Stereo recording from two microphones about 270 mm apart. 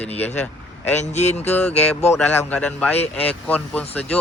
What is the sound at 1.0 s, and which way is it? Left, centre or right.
Speech, left.